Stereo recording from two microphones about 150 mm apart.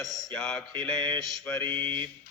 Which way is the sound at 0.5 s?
10° left (ahead or behind).